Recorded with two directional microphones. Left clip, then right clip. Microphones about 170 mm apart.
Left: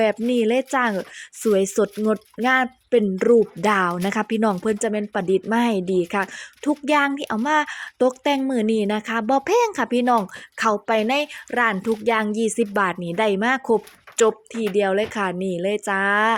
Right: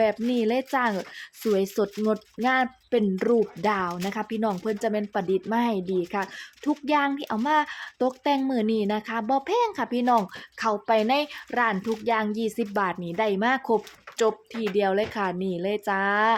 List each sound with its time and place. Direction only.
0.0 s a woman's voice: 15° left (ahead or behind)
3.7 s a woman's voice: 25° left (ahead or behind)